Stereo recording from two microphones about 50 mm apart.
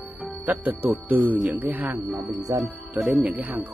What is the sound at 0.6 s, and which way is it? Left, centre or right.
Speech, right.